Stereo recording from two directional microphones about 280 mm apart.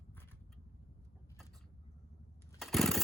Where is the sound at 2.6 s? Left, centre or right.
Centre.